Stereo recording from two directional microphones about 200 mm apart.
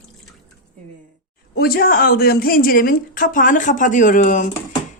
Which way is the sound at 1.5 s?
50° left (ahead or behind).